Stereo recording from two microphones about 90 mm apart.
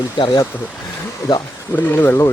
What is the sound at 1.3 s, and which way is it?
Speech, 45° left (ahead or behind).